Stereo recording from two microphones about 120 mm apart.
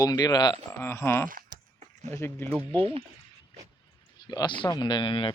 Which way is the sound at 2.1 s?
20° left (ahead or behind).